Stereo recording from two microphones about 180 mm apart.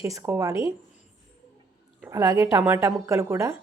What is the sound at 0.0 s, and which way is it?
Speech, 15° right (ahead or behind).